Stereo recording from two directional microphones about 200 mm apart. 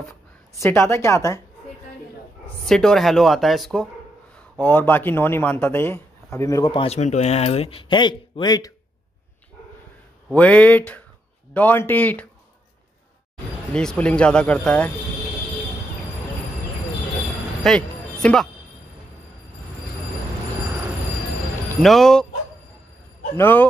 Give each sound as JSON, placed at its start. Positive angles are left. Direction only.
{"t": 0.6, "sound": "speech", "side_deg": 10}
{"t": 2.6, "sound": "speech", "side_deg": 0}
{"t": 10.3, "sound": "speech", "side_deg": 5}
{"t": 13.7, "sound": "speech", "side_deg": 5}
{"t": 17.6, "sound": "speech", "side_deg": 0}
{"t": 21.8, "sound": "speech", "side_deg": 0}
{"t": 23.3, "sound": "speech", "side_deg": 10}